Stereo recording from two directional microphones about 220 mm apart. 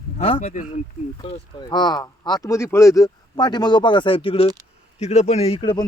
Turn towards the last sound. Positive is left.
turn(degrees=20)  # may be behind; listen again after turning